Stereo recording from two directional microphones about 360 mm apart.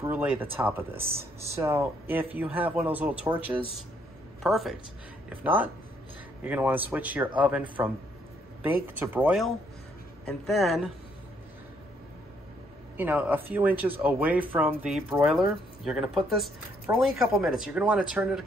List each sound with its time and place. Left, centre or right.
0.0 s speech: centre
4.4 s speech: centre
12.9 s speech: centre